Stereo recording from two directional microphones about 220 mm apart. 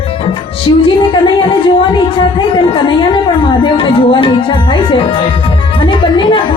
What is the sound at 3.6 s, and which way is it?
Music, 25° left (ahead or behind).